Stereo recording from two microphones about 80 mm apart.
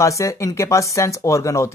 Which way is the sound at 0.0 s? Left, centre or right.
Left.